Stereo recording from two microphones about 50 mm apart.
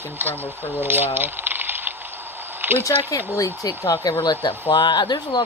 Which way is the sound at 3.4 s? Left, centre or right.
Left.